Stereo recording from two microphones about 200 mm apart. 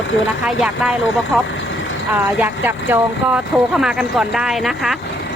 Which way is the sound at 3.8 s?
5° right (ahead or behind).